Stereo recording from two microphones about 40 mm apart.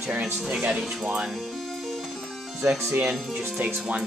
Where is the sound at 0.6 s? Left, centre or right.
Centre.